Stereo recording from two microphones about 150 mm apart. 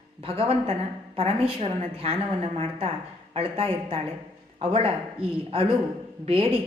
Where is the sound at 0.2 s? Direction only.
40° right (ahead or behind).